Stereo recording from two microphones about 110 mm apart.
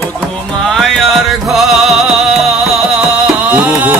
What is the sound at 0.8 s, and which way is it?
Music, centre (ahead or behind).